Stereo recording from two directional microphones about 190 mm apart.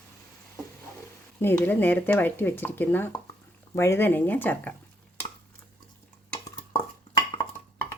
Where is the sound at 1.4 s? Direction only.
10° left (ahead or behind).